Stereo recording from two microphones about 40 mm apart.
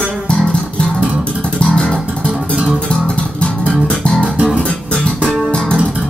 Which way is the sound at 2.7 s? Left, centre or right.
Left.